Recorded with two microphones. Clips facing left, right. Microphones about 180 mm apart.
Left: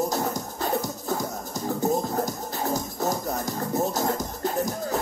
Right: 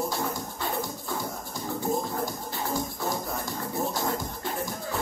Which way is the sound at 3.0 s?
40° left (ahead or behind).